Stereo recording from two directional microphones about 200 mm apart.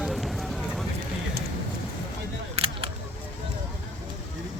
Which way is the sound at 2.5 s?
30° right (ahead or behind).